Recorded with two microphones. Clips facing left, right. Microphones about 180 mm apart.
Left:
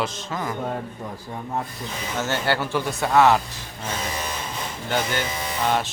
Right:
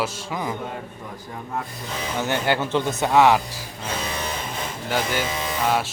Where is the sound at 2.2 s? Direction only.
15° right (ahead or behind).